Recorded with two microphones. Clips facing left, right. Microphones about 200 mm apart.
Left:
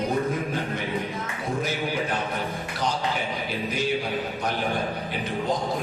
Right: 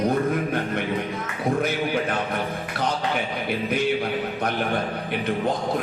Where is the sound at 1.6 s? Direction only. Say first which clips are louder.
Right 1 dB; 60° right (ahead or behind).